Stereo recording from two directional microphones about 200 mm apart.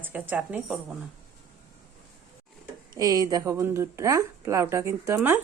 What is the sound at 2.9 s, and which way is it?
A woman's voice, 20° right (ahead or behind).